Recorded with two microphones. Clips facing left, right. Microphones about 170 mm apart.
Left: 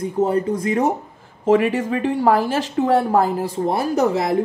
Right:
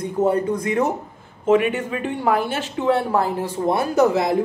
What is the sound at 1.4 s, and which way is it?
Speech, 35° left (ahead or behind).